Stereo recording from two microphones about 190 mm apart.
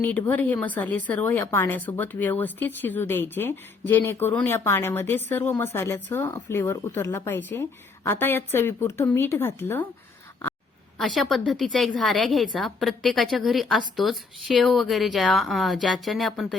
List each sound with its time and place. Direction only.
0.0 s speech: 10° left (ahead or behind)
10.9 s a woman's voice: centre (ahead or behind)